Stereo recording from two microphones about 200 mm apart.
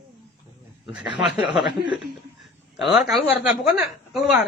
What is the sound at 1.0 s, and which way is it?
Speech, 60° left (ahead or behind).